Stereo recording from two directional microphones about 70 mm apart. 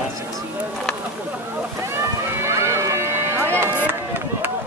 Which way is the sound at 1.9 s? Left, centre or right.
Right.